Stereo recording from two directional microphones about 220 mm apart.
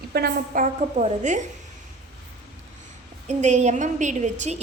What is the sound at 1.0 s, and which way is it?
Speech, 35° right (ahead or behind).